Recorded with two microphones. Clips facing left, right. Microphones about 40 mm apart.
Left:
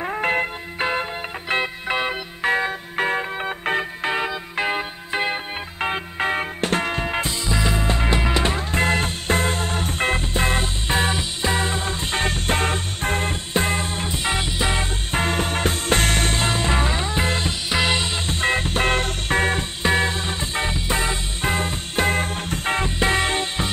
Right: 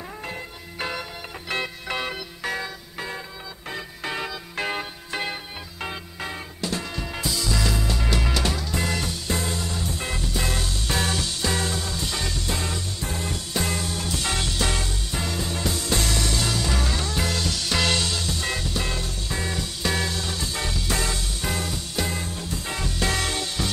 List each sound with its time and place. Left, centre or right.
0.0 s music: left
0.7 s music: left
2.5 s music: left
4.0 s music: left
15.0 s music: left
19.8 s music: left